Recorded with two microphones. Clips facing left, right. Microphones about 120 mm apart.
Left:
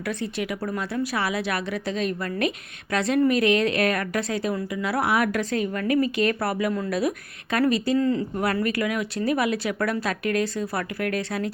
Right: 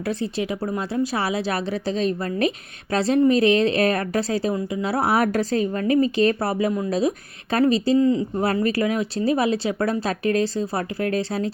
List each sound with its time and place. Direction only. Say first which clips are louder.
0.0 s a woman's voice: right 3 dB; 30° right (ahead or behind)
8.4 s speech: right 3 dB; 30° right (ahead or behind)